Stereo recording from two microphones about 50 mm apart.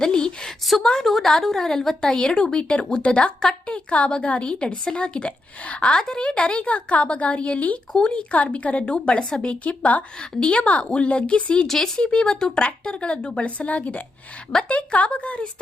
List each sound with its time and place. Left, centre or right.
0.0 s a sound: centre
0.9 s a woman's voice: centre; by 7.8 s left
7.9 s speech: centre
8.5 s a woman's voice: left
11.6 s a woman's voice: centre